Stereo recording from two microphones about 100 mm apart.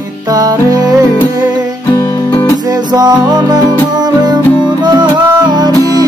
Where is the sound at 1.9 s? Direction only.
50° left (ahead or behind).